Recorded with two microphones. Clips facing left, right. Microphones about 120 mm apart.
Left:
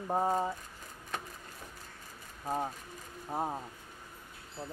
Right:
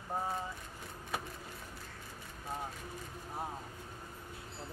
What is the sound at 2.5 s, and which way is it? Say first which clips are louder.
Speech: left 8 dB; 40° left (ahead or behind).